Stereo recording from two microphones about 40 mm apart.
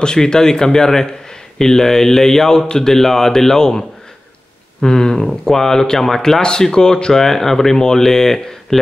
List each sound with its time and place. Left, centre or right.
0.0 s speech: centre
4.8 s speech: centre
6.4 s speech: centre